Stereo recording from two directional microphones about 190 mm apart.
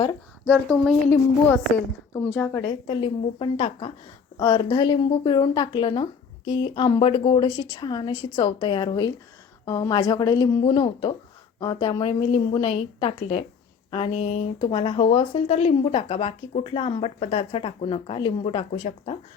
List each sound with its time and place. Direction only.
0.4 s speech: centre (ahead or behind)
2.2 s speech: 15° left (ahead or behind); by 19.1 s 30° left (ahead or behind)